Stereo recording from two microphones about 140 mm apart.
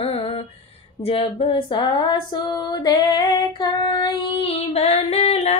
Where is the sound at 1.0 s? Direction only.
40° left (ahead or behind).